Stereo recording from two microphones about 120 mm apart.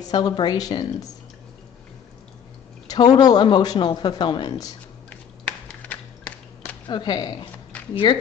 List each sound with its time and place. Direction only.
0.0 s speech: 35° left (ahead or behind)
2.9 s speech: 35° left (ahead or behind)
5.1 s a sound: 10° left (ahead or behind)
6.9 s speech: 40° left (ahead or behind)